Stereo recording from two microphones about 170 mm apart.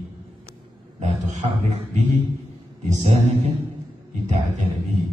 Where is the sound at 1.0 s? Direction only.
45° right (ahead or behind).